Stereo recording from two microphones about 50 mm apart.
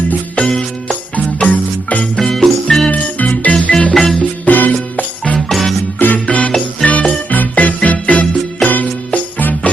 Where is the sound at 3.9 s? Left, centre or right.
Centre.